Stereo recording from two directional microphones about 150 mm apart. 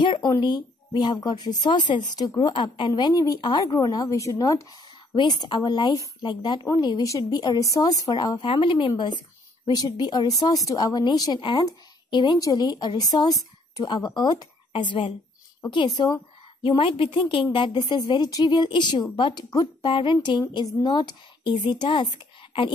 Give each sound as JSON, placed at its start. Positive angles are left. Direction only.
{"t": 0.0, "sound": "a woman's voice", "side_deg": 30}